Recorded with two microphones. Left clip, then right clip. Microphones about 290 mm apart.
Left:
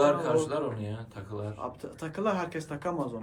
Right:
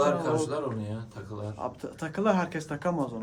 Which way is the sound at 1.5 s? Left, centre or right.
Right.